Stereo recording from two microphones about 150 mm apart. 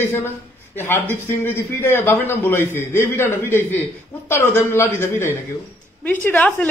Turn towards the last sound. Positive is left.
turn(degrees=10)  # may be behind; listen again after turning